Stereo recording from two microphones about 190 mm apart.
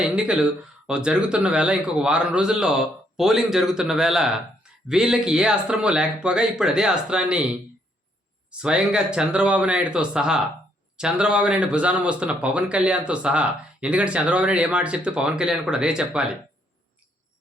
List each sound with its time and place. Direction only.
0.0 s speech: 5° right (ahead or behind)